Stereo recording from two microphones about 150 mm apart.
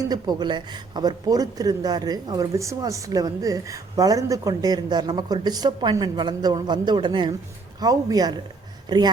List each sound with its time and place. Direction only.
0.1 s speech: 25° right (ahead or behind)